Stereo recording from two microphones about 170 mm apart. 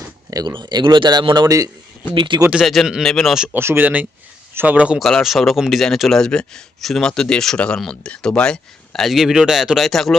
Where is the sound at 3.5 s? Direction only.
15° right (ahead or behind).